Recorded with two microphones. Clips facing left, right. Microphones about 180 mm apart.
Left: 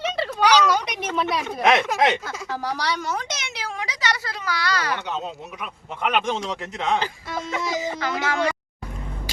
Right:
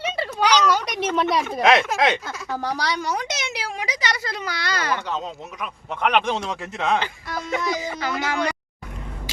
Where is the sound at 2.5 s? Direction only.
15° right (ahead or behind).